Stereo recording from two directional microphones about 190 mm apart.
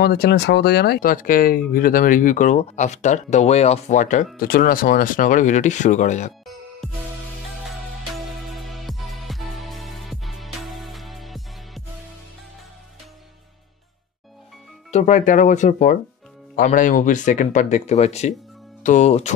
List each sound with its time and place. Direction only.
0.0 s speech: 55° left (ahead or behind); by 6.3 s 40° left (ahead or behind)
7.6 s music: centre (ahead or behind)
14.9 s speech: 40° left (ahead or behind)